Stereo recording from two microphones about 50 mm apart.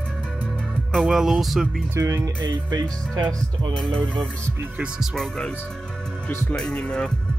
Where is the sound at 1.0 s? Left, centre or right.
Centre.